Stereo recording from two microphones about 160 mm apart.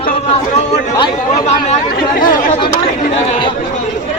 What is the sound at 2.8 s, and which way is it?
Speech, 50° left (ahead or behind).